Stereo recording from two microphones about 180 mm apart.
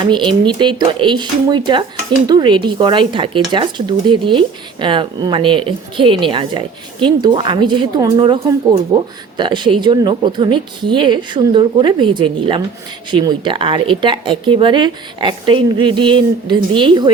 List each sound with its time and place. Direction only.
0.0 s speech: 25° right (ahead or behind)